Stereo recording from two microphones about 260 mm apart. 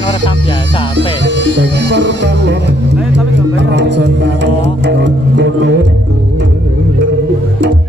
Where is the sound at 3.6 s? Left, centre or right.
Right.